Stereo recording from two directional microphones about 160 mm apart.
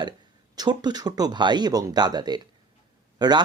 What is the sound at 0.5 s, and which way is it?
Speech, 25° right (ahead or behind).